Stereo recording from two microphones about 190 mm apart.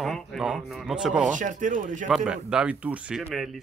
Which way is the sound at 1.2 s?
40° right (ahead or behind).